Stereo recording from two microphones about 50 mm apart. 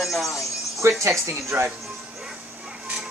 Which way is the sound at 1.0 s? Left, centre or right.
Right.